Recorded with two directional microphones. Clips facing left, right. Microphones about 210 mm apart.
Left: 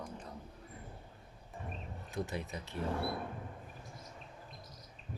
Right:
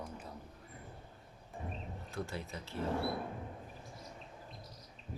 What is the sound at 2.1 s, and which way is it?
Speech, 15° left (ahead or behind).